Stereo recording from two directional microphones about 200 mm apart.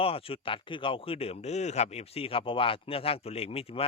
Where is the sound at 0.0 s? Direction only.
30° left (ahead or behind).